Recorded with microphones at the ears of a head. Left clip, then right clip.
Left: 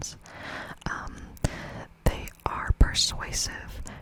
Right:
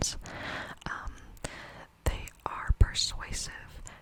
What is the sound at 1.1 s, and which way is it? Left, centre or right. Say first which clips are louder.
Whispering: left 7 dB; left.